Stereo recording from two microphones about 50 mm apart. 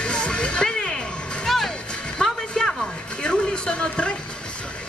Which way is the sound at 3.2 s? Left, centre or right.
Centre.